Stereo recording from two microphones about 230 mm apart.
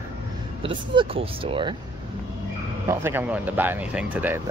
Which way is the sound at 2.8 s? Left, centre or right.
Centre.